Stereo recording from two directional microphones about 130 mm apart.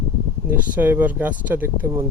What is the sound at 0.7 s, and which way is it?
Speech, 15° right (ahead or behind).